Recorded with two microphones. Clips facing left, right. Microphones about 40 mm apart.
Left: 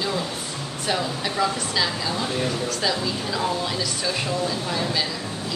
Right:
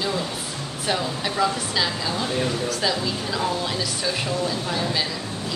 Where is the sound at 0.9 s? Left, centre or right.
Centre.